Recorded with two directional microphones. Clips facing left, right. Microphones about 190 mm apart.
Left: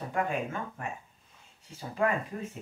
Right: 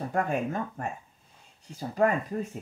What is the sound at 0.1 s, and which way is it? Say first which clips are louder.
Speech: right 2 dB; 40° right (ahead or behind).